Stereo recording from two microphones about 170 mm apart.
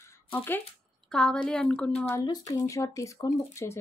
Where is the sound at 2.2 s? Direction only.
20° left (ahead or behind).